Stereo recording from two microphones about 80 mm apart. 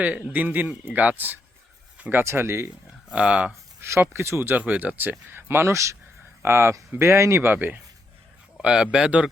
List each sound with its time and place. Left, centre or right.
0.0 s a man's voice: centre
3.1 s speech: centre
3.8 s a sound: right
4.1 s a man's voice: right
8.5 s speech: centre